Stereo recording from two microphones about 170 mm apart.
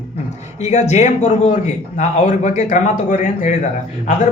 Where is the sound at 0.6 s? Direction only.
45° left (ahead or behind).